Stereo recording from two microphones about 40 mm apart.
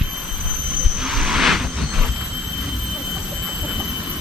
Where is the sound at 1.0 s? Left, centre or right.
Centre.